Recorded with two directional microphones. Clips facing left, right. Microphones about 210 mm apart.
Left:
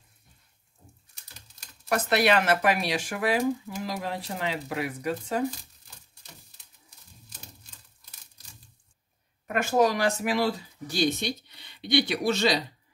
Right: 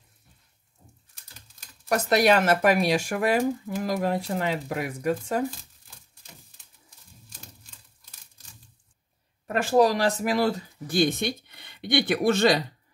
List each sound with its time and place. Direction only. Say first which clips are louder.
1.9 s speech: right 3 dB; 40° right (ahead or behind)
9.5 s speech: right 3 dB; 35° right (ahead or behind); by 12.5 s 50° right (ahead or behind)